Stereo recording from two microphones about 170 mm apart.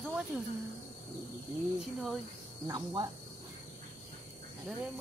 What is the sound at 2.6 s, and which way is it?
Speech, 25° right (ahead or behind).